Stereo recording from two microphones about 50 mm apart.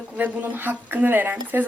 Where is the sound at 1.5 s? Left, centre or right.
Right.